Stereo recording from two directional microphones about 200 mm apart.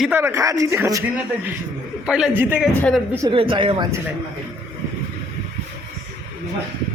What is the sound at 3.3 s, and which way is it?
Speech, 25° right (ahead or behind).